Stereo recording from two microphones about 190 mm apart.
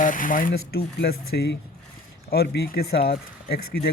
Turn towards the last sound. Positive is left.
turn(degrees=55)  # may be behind; listen again after turning